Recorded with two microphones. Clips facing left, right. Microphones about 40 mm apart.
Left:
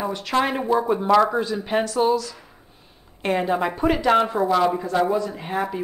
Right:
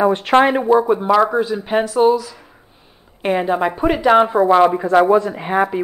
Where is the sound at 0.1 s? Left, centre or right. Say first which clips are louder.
Right 9 dB; right.